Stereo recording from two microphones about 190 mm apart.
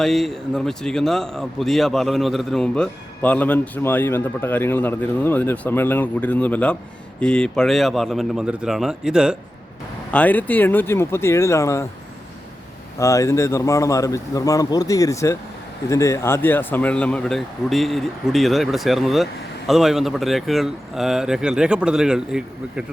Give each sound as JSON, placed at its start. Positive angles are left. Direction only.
{"t": 0.0, "sound": "speech", "side_deg": 0}
{"t": 10.1, "sound": "speech", "side_deg": 10}
{"t": 13.0, "sound": "speech", "side_deg": 15}